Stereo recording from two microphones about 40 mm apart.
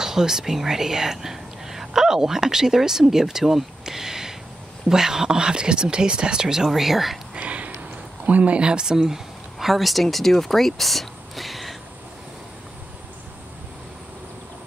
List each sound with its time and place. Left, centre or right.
0.0 s speech: centre
6.7 s speech: centre
7.3 s a sound: right
8.3 s speech: right
8.5 s speech: right
8.9 s speech: centre